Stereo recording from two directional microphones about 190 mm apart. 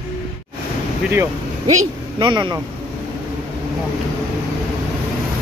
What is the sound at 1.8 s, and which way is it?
Speech, 25° right (ahead or behind).